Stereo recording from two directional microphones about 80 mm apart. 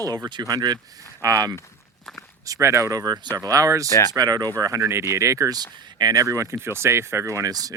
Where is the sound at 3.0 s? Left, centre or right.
Right.